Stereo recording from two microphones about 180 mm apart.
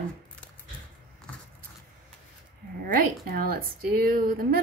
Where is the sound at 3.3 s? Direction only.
55° right (ahead or behind).